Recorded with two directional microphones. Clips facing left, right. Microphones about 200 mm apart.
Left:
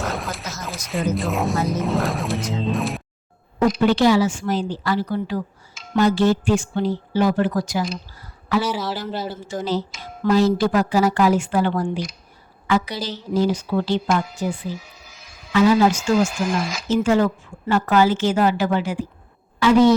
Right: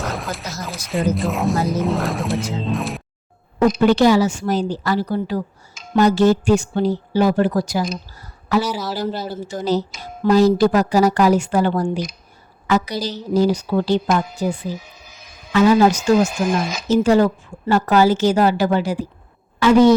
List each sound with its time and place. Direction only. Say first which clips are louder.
0.0 s a sound: right 1 dB; centre (ahead or behind)
1.1 s speech: right 2 dB; centre (ahead or behind)
3.8 s speech: right 2 dB; 45° right (ahead or behind)
14.7 s a sound: right 2 dB; 20° right (ahead or behind)
15.5 s a woman's voice: right 2 dB; 45° right (ahead or behind)
16.1 s speech: right 3 dB; 20° right (ahead or behind)
16.9 s speech: right 3 dB; 40° right (ahead or behind)
19.5 s a woman's voice: right 2 dB; 50° right (ahead or behind)